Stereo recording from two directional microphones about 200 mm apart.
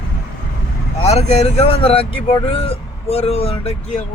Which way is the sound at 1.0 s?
30° left (ahead or behind).